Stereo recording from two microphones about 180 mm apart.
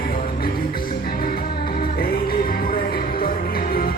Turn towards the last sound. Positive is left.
turn(degrees=55)  # may be behind; listen again after turning